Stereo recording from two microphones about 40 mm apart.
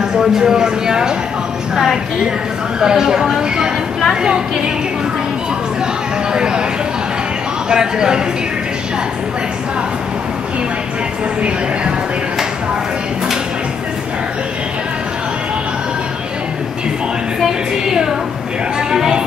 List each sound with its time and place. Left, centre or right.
0.4 s speech: centre
2.8 s speech: centre
6.3 s speech: right
7.7 s speech: centre
17.5 s a sound: centre
18.9 s speech: centre